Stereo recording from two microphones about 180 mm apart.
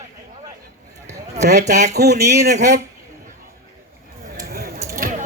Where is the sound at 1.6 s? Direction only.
40° right (ahead or behind).